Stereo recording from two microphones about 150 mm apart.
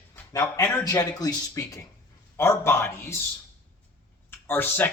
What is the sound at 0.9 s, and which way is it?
Speech, 25° left (ahead or behind).